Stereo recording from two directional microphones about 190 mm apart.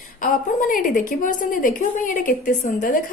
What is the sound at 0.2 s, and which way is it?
A woman's voice, 45° left (ahead or behind).